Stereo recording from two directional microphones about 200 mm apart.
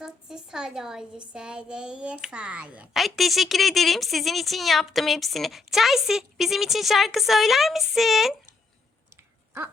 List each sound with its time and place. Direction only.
0.0 s a woman's voice: 5° right (ahead or behind)